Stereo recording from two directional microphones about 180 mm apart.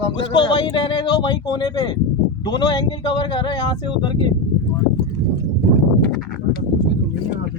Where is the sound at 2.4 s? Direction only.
25° left (ahead or behind).